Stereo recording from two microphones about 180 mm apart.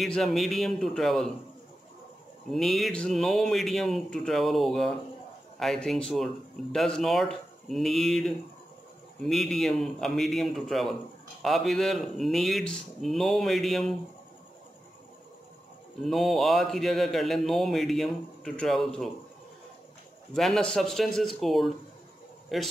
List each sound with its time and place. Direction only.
0.0 s a man's voice: centre (ahead or behind)
2.5 s a man's voice: centre (ahead or behind)
16.0 s a man's voice: centre (ahead or behind)
20.3 s a man's voice: centre (ahead or behind)